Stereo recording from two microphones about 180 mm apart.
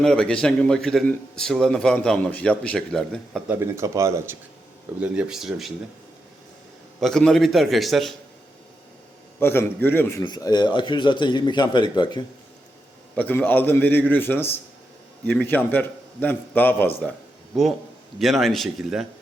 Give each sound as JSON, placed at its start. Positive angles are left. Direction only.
{"t": 0.0, "sound": "a man's voice", "side_deg": 5}
{"t": 3.5, "sound": "a man's voice", "side_deg": -15}
{"t": 7.0, "sound": "a man's voice", "side_deg": 5}
{"t": 9.4, "sound": "a man's voice", "side_deg": 15}
{"t": 10.2, "sound": "speech", "side_deg": 25}
{"t": 13.1, "sound": "a man's voice", "side_deg": 10}
{"t": 17.5, "sound": "a man's voice", "side_deg": 0}